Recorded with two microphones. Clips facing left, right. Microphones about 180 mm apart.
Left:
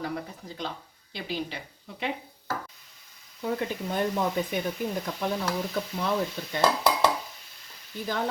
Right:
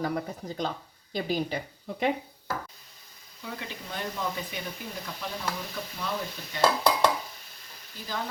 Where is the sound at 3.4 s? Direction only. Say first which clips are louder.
Left 10 dB; 50° left (ahead or behind).